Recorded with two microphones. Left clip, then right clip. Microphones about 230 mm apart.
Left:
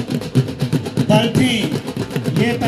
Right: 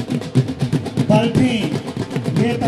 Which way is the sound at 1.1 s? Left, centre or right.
Left.